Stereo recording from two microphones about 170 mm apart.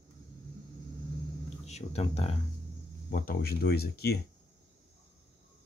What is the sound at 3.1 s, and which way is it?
Speech, 60° left (ahead or behind).